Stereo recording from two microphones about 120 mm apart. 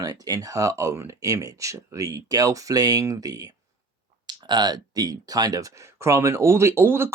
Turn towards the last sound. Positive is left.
turn(degrees=-20)  # may be behind; listen again after turning